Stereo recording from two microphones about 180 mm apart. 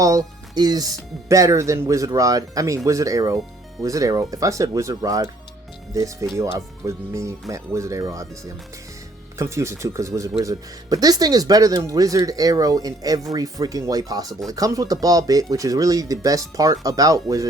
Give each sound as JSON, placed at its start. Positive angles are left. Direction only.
{"t": 0.5, "sound": "speech", "side_deg": -20}